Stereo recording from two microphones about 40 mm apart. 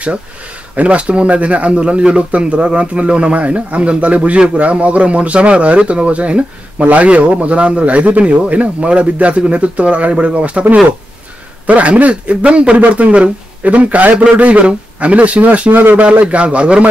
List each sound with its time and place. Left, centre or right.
0.7 s speech: right
15.7 s speech: right
16.0 s speech: right